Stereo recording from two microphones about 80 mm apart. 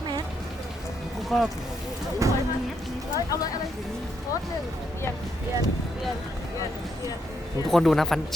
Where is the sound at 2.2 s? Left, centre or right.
Right.